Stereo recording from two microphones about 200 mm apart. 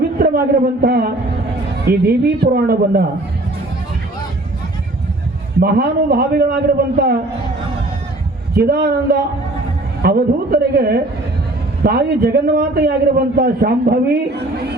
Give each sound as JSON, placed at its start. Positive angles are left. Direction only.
{"t": 0.2, "sound": "a man's voice", "side_deg": -45}
{"t": 5.5, "sound": "a man's voice", "side_deg": -50}
{"t": 8.5, "sound": "a man's voice", "side_deg": -50}